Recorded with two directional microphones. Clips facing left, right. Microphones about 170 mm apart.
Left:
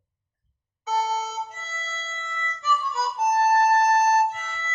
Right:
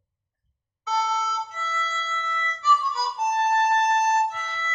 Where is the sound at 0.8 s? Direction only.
45° left (ahead or behind).